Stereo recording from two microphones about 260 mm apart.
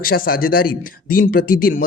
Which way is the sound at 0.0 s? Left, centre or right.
Left.